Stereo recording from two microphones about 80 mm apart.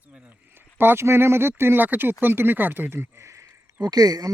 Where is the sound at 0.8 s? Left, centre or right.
Right.